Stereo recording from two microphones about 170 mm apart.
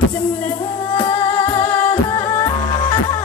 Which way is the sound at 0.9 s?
30° left (ahead or behind).